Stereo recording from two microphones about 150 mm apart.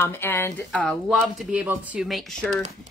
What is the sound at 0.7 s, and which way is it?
Speech, 5° left (ahead or behind).